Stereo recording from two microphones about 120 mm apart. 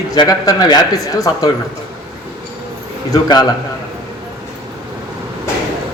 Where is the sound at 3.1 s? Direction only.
35° left (ahead or behind).